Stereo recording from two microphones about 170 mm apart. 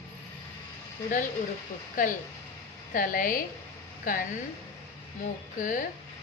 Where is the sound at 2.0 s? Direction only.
50° left (ahead or behind).